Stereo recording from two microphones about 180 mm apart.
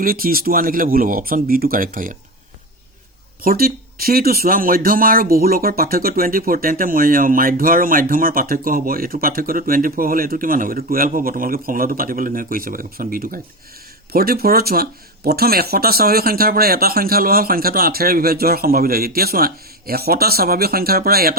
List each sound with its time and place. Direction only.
0.0 s speech: 55° right (ahead or behind)
3.4 s speech: 55° right (ahead or behind)